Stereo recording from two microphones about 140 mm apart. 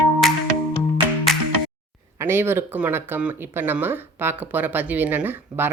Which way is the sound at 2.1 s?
15° right (ahead or behind).